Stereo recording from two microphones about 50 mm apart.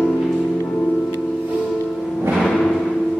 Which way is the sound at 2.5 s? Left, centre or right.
Centre.